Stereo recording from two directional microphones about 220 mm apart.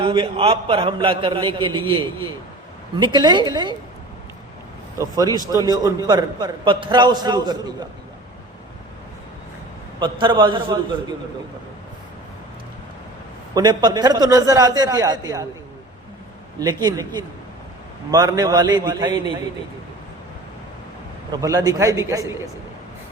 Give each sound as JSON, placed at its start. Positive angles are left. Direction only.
{"t": 0.0, "sound": "a man's voice", "side_deg": -25}
{"t": 4.9, "sound": "a man's voice", "side_deg": -15}
{"t": 10.0, "sound": "a man's voice", "side_deg": -20}
{"t": 13.5, "sound": "a man's voice", "side_deg": -20}
{"t": 16.6, "sound": "a man's voice", "side_deg": -15}
{"t": 21.4, "sound": "a man's voice", "side_deg": -15}